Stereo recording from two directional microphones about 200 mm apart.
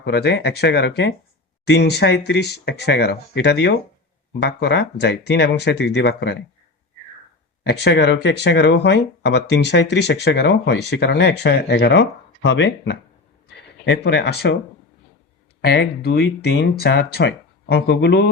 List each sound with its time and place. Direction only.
0.0 s speech: 55° left (ahead or behind)
7.6 s speech: 60° left (ahead or behind)
15.6 s speech: 50° left (ahead or behind)